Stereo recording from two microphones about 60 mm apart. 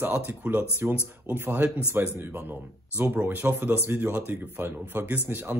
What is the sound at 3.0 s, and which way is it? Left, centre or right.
Speech, right.